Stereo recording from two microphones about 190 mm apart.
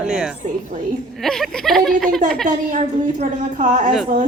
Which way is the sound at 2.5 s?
45° right (ahead or behind).